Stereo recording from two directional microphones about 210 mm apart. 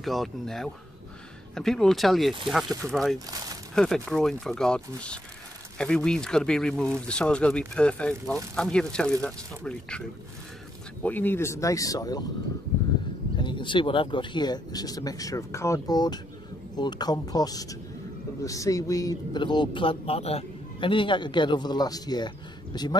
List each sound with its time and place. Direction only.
0.0 s speech: centre (ahead or behind); by 12.3 s 15° left (ahead or behind)
13.4 s speech: 20° left (ahead or behind)